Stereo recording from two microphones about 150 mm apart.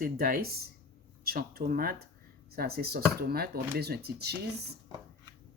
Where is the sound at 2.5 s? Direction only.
90° right.